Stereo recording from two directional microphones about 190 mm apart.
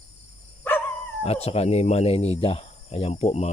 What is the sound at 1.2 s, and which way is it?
Speech, 30° left (ahead or behind).